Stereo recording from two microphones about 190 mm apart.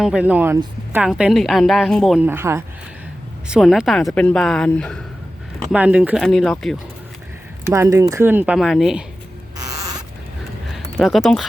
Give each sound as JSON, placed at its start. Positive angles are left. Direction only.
{"t": 0.0, "sound": "speech", "side_deg": -5}
{"t": 2.2, "sound": "speech", "side_deg": -10}
{"t": 3.5, "sound": "speech", "side_deg": 0}
{"t": 5.7, "sound": "speech", "side_deg": -5}
{"t": 7.7, "sound": "speech", "side_deg": -15}
{"t": 9.6, "sound": "rodents", "side_deg": -20}
{"t": 10.7, "sound": "a sound", "side_deg": 0}